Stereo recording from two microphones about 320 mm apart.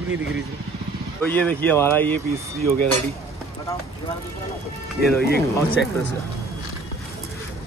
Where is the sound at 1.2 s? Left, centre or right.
Centre.